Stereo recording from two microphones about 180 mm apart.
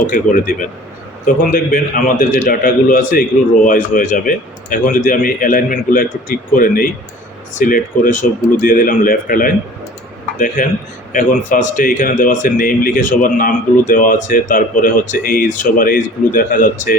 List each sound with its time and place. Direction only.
0.1 s a man's voice: 50° left (ahead or behind)